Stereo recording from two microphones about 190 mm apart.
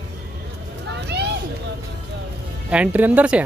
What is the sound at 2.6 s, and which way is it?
Speech, 5° right (ahead or behind).